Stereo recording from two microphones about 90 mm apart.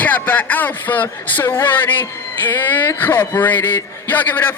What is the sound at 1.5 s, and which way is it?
A man's voice, 25° left (ahead or behind).